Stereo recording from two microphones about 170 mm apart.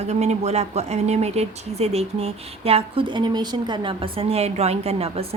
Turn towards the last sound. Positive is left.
turn(degrees=-35)  # may be behind; listen again after turning